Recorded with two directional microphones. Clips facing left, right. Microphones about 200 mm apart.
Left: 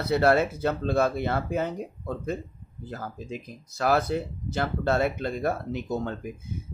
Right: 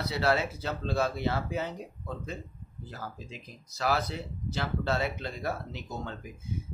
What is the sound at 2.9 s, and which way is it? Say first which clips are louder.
Speech: left 7 dB; 50° left (ahead or behind).